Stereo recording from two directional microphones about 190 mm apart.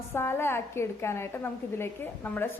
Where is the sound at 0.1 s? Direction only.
10° left (ahead or behind).